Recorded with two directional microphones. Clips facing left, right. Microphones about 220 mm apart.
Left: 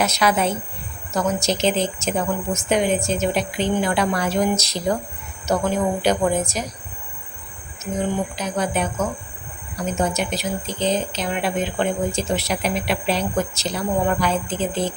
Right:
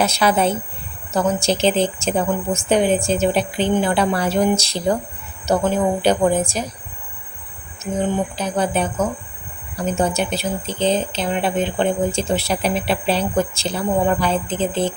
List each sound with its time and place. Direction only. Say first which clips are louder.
0.0 s a woman's voice: right 2 dB; 30° right (ahead or behind)
8.4 s a woman's voice: right 3 dB; 30° right (ahead or behind)